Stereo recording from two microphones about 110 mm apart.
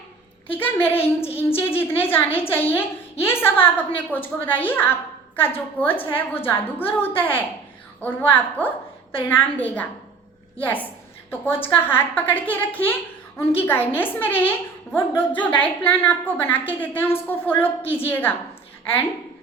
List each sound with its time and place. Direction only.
0.5 s a woman's voice: 15° left (ahead or behind)